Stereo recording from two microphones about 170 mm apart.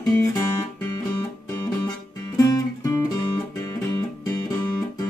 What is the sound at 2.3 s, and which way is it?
Music, 20° left (ahead or behind).